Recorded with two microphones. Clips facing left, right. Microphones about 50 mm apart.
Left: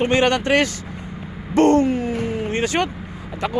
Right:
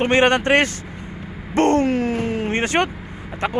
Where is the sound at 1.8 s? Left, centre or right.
Right.